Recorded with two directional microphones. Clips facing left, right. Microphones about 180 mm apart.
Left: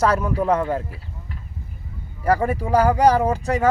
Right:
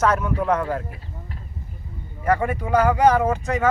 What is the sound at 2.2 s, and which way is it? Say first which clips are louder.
Speech: left 2 dB; 35° left (ahead or behind).